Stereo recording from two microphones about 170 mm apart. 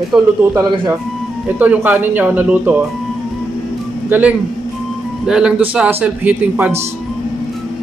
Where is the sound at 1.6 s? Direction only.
10° right (ahead or behind).